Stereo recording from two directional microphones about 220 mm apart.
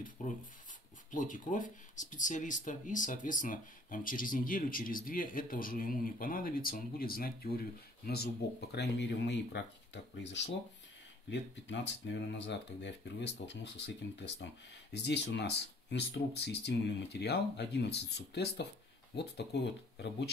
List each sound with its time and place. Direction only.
0.2 s speech: 35° left (ahead or behind)